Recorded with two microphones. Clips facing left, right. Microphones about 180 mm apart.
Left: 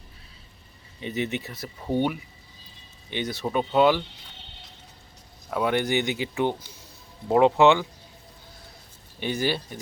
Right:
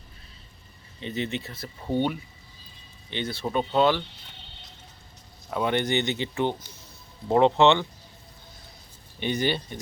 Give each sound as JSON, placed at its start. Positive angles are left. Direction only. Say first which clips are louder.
{"t": 0.9, "sound": "speech", "louder": "left 2 dB", "side_deg": 15}
{"t": 3.4, "sound": "speech", "louder": "left 2 dB", "side_deg": 5}
{"t": 5.5, "sound": "speech", "louder": "left 1 dB", "side_deg": 5}
{"t": 9.2, "sound": "speech", "louder": "even", "side_deg": 5}